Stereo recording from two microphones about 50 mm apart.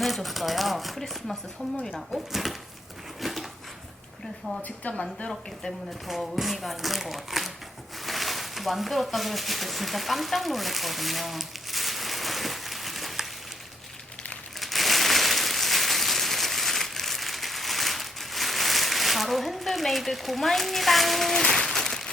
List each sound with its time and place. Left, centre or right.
0.0 s speech: centre
3.2 s dog: centre
4.8 s a woman's voice: left
6.1 s speech: centre
8.0 s a sound: centre
14.6 s a sound: centre